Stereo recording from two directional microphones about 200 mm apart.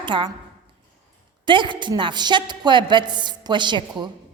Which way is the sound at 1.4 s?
25° right (ahead or behind).